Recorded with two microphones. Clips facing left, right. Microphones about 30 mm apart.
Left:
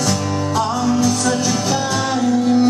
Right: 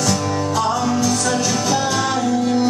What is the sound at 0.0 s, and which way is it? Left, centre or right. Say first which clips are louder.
Music: even; centre.